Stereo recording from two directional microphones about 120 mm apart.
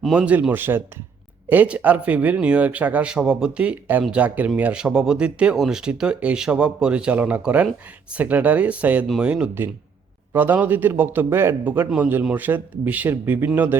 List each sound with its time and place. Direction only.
0.0 s speech: 10° right (ahead or behind)